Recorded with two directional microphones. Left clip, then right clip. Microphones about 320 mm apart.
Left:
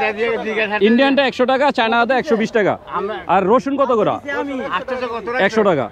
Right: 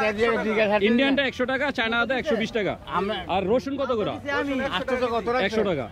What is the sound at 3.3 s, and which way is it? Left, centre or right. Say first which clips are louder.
Speech: left 12 dB; left.